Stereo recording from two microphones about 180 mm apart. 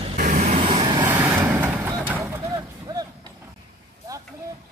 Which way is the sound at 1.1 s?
10° right (ahead or behind).